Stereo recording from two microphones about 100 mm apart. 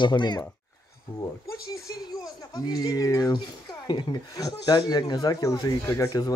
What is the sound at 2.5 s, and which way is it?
Speech, 40° left (ahead or behind).